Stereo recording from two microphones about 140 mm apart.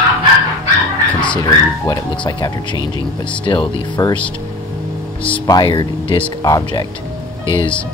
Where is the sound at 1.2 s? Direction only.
30° left (ahead or behind).